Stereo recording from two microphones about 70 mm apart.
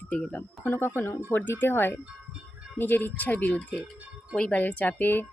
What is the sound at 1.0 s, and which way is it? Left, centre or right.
Speech, left.